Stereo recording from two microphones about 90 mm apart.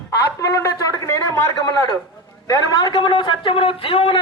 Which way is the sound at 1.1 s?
30° left (ahead or behind).